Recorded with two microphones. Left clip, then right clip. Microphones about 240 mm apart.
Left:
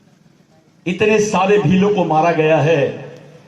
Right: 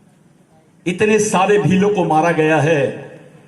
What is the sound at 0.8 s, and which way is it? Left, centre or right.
A man's voice, right.